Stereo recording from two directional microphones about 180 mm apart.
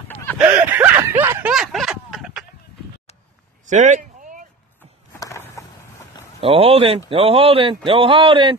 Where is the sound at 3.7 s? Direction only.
45° right (ahead or behind).